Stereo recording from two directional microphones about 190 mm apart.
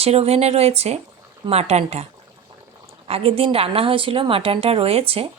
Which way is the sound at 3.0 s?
30° right (ahead or behind).